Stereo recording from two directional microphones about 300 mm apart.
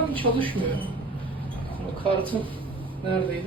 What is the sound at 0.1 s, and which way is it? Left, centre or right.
Speech, centre.